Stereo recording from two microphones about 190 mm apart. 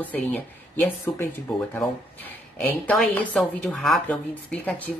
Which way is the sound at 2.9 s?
5° left (ahead or behind).